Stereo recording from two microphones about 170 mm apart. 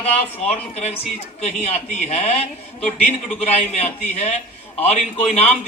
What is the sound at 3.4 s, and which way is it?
A man's voice, 40° left (ahead or behind).